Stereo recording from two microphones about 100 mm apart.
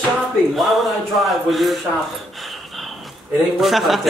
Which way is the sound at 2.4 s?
Centre (ahead or behind).